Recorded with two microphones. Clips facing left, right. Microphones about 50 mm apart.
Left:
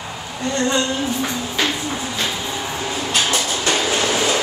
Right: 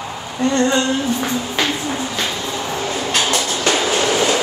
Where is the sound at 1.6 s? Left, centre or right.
Centre.